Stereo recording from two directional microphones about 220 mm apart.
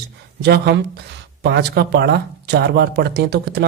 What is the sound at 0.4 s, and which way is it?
Speech, 50° right (ahead or behind).